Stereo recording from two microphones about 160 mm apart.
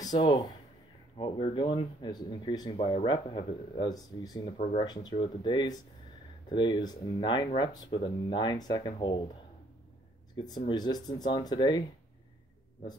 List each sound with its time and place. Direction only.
0.0 s speech: 25° left (ahead or behind)
10.3 s speech: 25° left (ahead or behind)